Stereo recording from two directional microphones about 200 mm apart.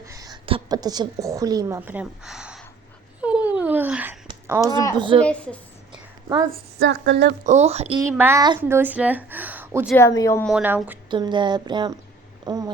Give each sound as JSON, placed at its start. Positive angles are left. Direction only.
{"t": 0.0, "sound": "a woman's voice", "side_deg": -15}
{"t": 3.2, "sound": "a sound", "side_deg": -5}
{"t": 4.9, "sound": "speech", "side_deg": -25}
{"t": 5.2, "sound": "a woman's voice", "side_deg": 5}
{"t": 6.7, "sound": "a woman's voice", "side_deg": -65}
{"t": 7.4, "sound": "speech", "side_deg": -35}
{"t": 8.1, "sound": "a woman's voice", "side_deg": -10}
{"t": 9.9, "sound": "speech", "side_deg": 15}
{"t": 10.4, "sound": "a woman's voice", "side_deg": -5}
{"t": 11.1, "sound": "speech", "side_deg": -25}